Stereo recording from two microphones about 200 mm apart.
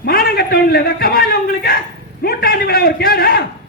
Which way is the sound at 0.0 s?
50° left (ahead or behind).